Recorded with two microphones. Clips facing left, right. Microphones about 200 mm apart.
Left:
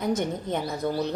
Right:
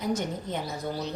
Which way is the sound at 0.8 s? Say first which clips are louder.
Left 7 dB; 60° left (ahead or behind).